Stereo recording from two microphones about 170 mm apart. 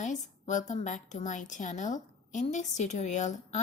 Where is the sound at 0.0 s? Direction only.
45° left (ahead or behind).